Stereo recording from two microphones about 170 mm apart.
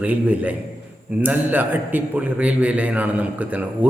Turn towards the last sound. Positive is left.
turn(degrees=-10)  # may be behind; listen again after turning